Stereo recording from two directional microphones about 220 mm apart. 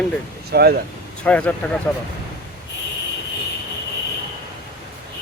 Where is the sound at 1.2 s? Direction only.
5° left (ahead or behind).